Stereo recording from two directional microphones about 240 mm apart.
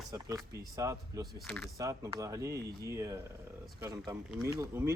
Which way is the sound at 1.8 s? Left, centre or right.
Centre.